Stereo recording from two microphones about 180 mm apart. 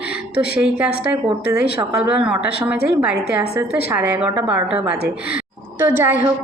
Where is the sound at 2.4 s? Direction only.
65° left (ahead or behind).